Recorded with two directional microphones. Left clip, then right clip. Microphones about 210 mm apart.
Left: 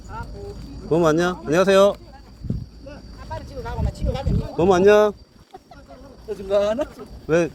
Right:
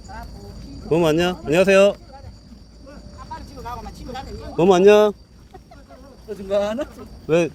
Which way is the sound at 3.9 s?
30° right (ahead or behind).